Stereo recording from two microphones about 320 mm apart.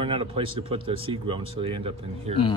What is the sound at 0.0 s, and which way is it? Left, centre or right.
Speech, centre.